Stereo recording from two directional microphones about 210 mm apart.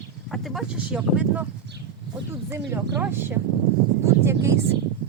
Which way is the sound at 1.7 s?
55° right (ahead or behind).